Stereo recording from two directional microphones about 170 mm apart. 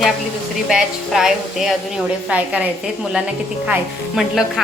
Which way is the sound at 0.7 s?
5° right (ahead or behind).